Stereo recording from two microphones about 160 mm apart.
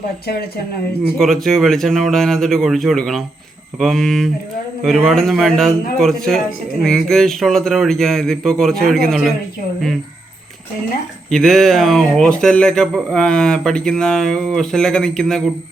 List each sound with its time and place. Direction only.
0.3 s speech: 75° left (ahead or behind)
1.2 s speech: centre (ahead or behind)
11.3 s speech: centre (ahead or behind)